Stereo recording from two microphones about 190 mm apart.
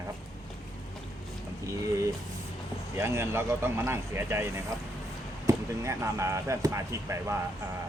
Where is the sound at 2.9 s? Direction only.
15° right (ahead or behind).